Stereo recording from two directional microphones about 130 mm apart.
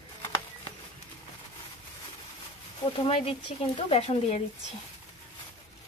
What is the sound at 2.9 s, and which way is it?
A woman's voice, 45° left (ahead or behind).